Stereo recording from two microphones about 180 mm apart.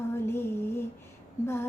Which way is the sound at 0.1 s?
15° left (ahead or behind).